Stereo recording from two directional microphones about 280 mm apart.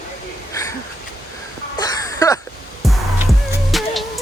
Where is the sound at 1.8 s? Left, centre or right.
Centre.